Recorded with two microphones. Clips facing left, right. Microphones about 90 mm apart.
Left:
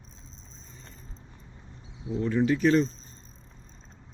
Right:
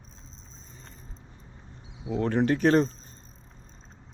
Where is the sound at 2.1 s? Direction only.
60° right (ahead or behind).